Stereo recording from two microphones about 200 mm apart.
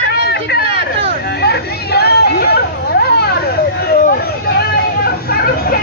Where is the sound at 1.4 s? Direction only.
55° left (ahead or behind).